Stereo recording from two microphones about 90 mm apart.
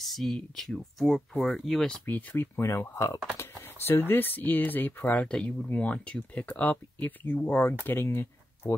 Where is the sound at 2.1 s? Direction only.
20° left (ahead or behind).